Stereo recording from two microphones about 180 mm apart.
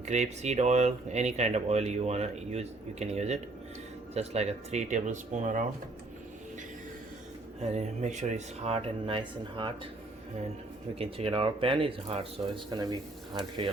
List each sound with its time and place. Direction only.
0.0 s speech: 40° right (ahead or behind)
7.6 s speech: 40° right (ahead or behind)
10.9 s speech: 30° right (ahead or behind)
12.7 s speech: 20° right (ahead or behind)